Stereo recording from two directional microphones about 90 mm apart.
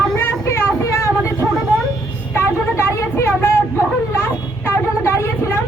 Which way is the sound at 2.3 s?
30° left (ahead or behind).